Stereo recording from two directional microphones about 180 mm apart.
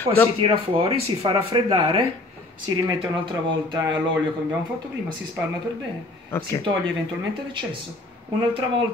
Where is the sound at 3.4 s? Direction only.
20° right (ahead or behind).